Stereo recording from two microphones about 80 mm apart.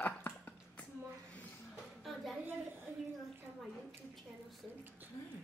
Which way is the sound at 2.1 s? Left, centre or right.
Centre.